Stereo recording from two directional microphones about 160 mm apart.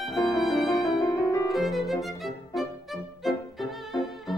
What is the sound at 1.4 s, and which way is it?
Violin, centre (ahead or behind).